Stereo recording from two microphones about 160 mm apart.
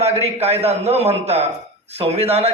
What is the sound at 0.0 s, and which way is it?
A man's voice, 40° right (ahead or behind).